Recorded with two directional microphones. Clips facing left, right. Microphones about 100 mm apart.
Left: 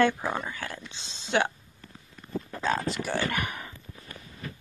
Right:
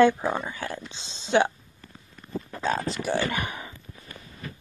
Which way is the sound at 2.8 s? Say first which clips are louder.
Right 2 dB; 20° right (ahead or behind).